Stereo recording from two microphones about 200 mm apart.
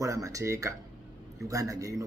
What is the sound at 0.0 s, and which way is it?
A man's voice, 15° right (ahead or behind).